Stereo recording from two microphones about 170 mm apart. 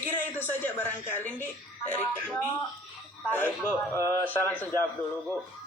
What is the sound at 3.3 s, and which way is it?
A woman's voice, 10° left (ahead or behind).